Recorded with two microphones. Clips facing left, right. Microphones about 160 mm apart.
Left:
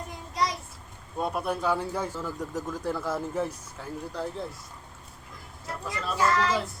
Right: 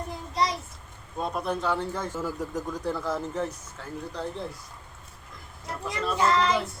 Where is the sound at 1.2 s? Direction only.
10° left (ahead or behind).